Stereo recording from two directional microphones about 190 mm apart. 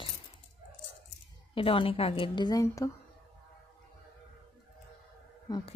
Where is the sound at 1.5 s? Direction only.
30° left (ahead or behind).